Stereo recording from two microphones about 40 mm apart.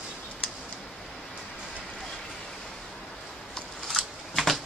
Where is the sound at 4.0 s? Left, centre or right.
Centre.